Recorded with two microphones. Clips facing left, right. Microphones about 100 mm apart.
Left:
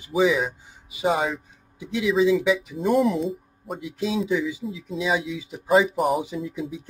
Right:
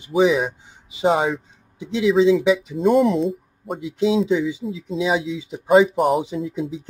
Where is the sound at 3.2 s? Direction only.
Centre (ahead or behind).